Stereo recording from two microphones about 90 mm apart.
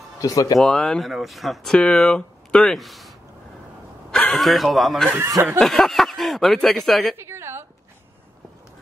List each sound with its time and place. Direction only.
0.2 s speech: 40° left (ahead or behind)
0.6 s speech: 5° left (ahead or behind)
4.1 s speech: 5° left (ahead or behind)
7.2 s a sound: 30° right (ahead or behind)